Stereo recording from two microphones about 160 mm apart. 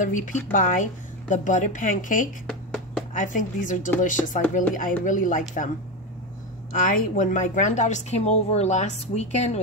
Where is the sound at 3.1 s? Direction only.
55° left (ahead or behind).